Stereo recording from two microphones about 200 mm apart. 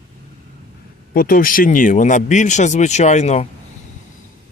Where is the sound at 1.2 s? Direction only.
45° left (ahead or behind).